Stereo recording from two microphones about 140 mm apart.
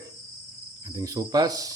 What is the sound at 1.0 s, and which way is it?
Speech, 25° right (ahead or behind).